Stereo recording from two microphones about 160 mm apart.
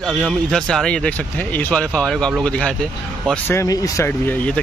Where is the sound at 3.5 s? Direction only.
20° left (ahead or behind).